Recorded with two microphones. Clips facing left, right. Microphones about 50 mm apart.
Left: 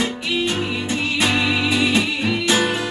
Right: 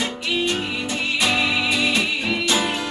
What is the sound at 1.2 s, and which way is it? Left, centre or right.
Music, centre.